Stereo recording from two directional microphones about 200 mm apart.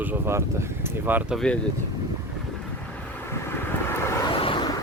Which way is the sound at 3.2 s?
10° left (ahead or behind).